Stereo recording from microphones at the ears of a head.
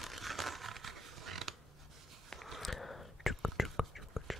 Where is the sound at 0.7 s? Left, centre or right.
Right.